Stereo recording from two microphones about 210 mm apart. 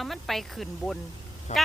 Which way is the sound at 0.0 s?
Centre (ahead or behind).